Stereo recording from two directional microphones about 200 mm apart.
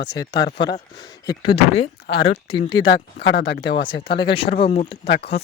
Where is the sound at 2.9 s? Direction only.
65° left (ahead or behind).